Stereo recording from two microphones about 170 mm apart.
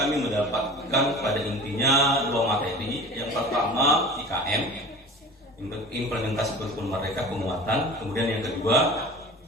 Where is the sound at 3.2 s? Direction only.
20° left (ahead or behind).